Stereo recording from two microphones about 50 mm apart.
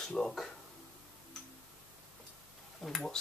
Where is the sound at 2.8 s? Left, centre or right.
Centre.